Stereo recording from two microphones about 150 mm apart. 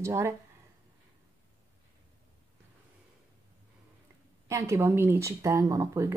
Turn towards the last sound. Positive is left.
turn(degrees=-20)  # may be behind; listen again after turning